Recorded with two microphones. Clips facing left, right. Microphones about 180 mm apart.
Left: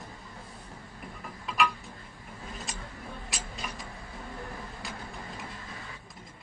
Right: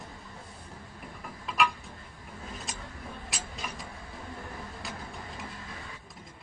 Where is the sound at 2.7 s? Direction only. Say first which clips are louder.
Even; centre (ahead or behind).